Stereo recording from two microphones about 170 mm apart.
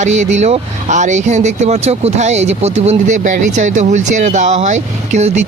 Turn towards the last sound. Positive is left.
turn(degrees=-45)  # may be behind; listen again after turning